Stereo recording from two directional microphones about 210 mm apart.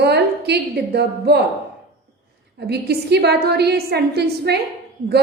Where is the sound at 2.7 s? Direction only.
50° right (ahead or behind).